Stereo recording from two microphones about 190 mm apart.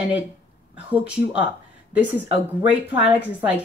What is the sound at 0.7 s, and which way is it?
Speech, 5° right (ahead or behind).